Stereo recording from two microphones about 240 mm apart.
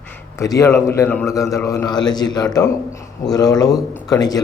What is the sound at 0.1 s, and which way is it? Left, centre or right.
A man's voice, centre.